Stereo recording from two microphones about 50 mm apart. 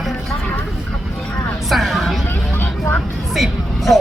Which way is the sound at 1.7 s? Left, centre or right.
Centre.